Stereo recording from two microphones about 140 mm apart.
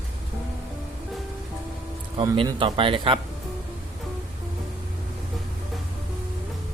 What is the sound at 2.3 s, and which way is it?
Speech, 35° right (ahead or behind).